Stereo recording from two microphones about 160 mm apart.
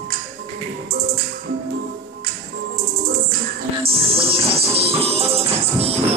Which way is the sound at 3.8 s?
35° right (ahead or behind).